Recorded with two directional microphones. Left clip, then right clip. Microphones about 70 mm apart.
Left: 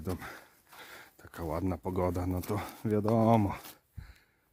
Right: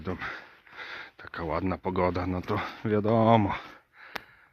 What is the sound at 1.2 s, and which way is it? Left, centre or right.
Speech, left.